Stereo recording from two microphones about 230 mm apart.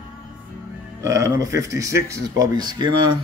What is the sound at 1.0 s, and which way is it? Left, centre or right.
Speech, centre.